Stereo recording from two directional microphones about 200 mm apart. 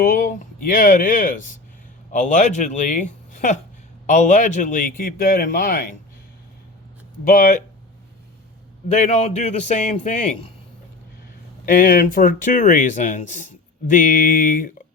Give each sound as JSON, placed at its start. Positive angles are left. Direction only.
{"t": 0.0, "sound": "speech", "side_deg": 45}
{"t": 7.3, "sound": "speech", "side_deg": 40}
{"t": 8.9, "sound": "speech", "side_deg": 35}
{"t": 11.6, "sound": "speech", "side_deg": 45}